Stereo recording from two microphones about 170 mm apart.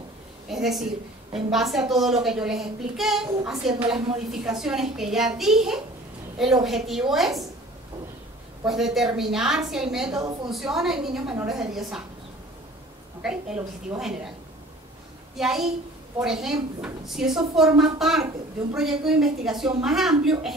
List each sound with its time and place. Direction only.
0.5 s a woman's voice: centre (ahead or behind)
8.6 s a child's voice: centre (ahead or behind)
10.1 s a woman's voice: 25° right (ahead or behind)
10.5 s a child's voice: centre (ahead or behind)
13.2 s a child's voice: 5° right (ahead or behind)
15.3 s a child's voice: centre (ahead or behind)